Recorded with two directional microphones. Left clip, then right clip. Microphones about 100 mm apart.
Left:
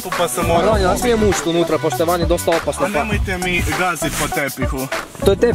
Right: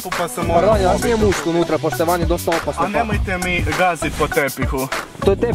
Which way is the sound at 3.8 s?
40° right (ahead or behind).